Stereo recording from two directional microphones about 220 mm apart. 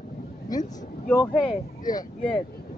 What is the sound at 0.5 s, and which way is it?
Speech, 15° left (ahead or behind).